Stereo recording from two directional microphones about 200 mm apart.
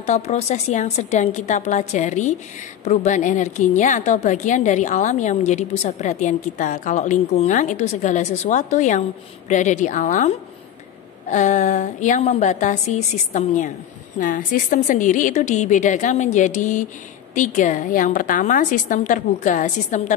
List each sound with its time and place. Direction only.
0.0 s a woman's voice: 35° left (ahead or behind)